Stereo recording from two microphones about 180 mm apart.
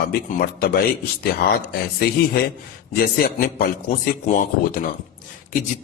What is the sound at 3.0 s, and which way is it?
A man's voice, 55° left (ahead or behind).